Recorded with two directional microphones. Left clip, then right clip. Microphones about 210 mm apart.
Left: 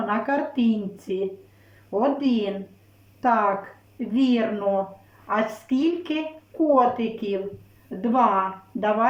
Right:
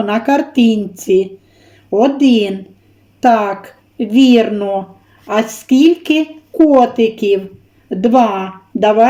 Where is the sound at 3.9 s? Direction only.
40° right (ahead or behind).